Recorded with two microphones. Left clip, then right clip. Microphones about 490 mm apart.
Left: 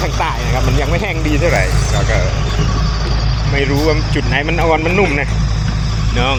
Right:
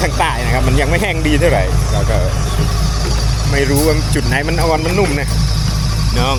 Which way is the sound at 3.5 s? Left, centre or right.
Right.